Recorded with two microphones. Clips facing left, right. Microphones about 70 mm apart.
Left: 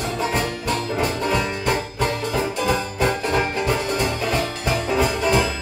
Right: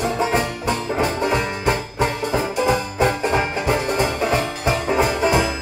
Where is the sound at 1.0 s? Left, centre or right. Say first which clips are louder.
Right 2 dB; right.